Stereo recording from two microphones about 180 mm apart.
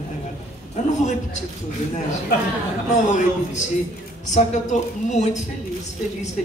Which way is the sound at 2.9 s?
45° left (ahead or behind).